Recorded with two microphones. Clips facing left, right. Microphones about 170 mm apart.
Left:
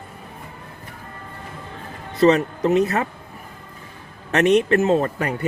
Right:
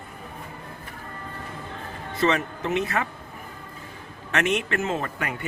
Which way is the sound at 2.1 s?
40° left (ahead or behind).